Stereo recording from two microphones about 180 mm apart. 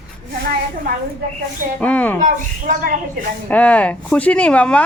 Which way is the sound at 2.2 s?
45° right (ahead or behind).